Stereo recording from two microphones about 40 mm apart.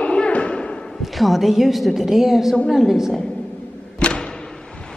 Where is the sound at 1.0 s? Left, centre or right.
Centre.